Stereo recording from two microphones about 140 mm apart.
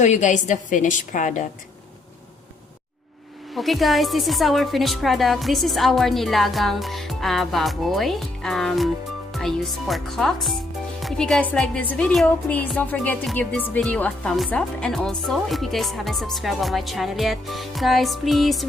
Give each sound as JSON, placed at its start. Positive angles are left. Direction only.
{"t": 0.0, "sound": "a woman's voice", "side_deg": 60}
{"t": 3.5, "sound": "a woman's voice", "side_deg": 0}